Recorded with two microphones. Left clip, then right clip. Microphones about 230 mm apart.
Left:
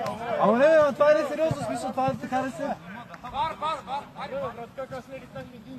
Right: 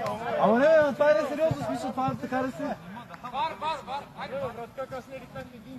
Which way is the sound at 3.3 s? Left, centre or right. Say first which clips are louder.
Left 2 dB; centre.